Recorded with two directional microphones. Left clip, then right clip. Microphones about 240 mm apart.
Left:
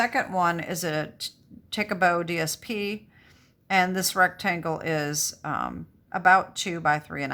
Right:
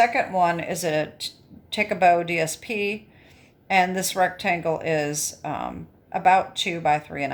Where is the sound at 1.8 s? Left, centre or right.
Centre.